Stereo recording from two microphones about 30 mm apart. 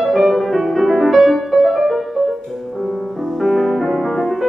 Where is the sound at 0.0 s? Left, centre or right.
Centre.